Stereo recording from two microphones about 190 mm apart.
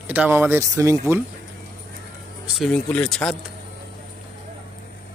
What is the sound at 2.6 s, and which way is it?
Speech, 5° left (ahead or behind).